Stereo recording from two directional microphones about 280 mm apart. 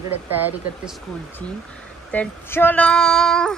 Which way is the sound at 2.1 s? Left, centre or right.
Centre.